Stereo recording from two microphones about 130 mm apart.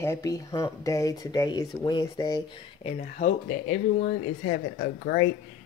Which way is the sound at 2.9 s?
80° left.